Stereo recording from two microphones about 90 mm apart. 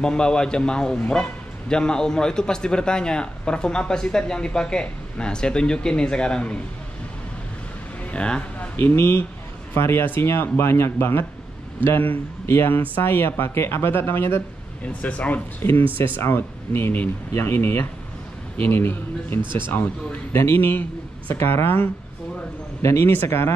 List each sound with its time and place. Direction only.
0.0 s a man's voice: 10° left (ahead or behind)
8.0 s a sound: 15° left (ahead or behind)
8.7 s speech: 30° left (ahead or behind)
14.9 s a man's voice: 15° left (ahead or behind)
16.0 s speech: 25° left (ahead or behind)
19.4 s speech: 60° right (ahead or behind)
19.7 s speech: 20° left (ahead or behind)